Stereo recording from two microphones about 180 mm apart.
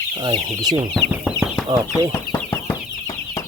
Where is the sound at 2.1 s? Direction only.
15° left (ahead or behind).